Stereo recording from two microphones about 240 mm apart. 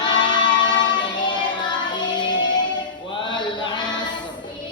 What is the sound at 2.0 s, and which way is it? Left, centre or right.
Music, centre.